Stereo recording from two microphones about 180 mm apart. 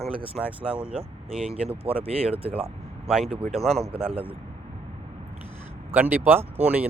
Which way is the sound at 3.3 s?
35° right (ahead or behind).